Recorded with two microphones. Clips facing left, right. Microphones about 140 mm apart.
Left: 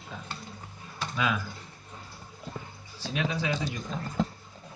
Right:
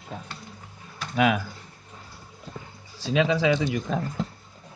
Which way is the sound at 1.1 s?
75° right (ahead or behind).